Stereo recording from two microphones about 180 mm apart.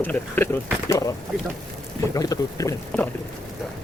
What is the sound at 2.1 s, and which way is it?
Boat, 20° left (ahead or behind).